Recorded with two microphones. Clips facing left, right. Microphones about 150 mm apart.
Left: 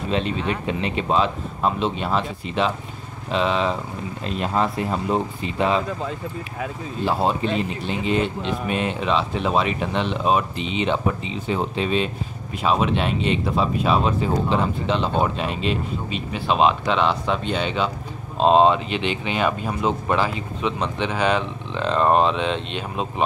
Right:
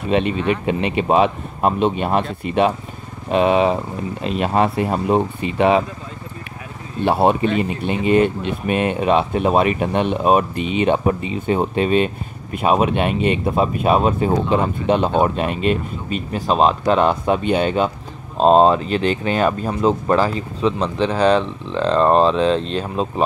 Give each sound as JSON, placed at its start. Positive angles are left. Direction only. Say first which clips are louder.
{"t": 0.1, "sound": "speech", "louder": "right 6 dB", "side_deg": -65}
{"t": 4.2, "sound": "speech", "louder": "right 5 dB", "side_deg": -70}
{"t": 7.1, "sound": "speech", "louder": "right 6 dB", "side_deg": -65}
{"t": 16.3, "sound": "speech", "louder": "right 2 dB", "side_deg": -40}
{"t": 21.3, "sound": "speech", "louder": "right 6 dB", "side_deg": 5}
{"t": 22.1, "sound": "speech", "louder": "right 5 dB", "side_deg": -35}